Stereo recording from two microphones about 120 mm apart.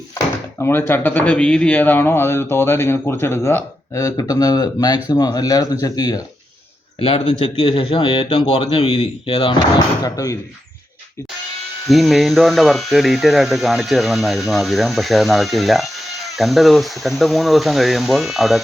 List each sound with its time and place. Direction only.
0.6 s speech: 20° left (ahead or behind)
7.0 s speech: 50° left (ahead or behind)
9.7 s speech: 30° left (ahead or behind)
11.9 s speech: centre (ahead or behind)